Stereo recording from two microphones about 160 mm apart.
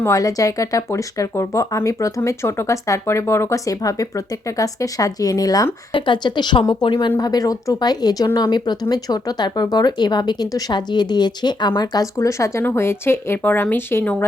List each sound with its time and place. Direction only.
0.0 s speech: 20° left (ahead or behind)